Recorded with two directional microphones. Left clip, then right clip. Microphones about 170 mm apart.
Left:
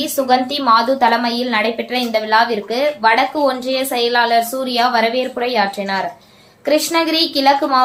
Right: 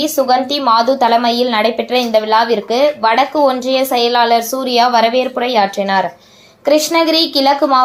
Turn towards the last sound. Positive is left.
turn(degrees=-25)  # may be behind; listen again after turning